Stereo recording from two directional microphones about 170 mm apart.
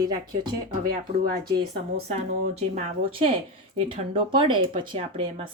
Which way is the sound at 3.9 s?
30° right (ahead or behind).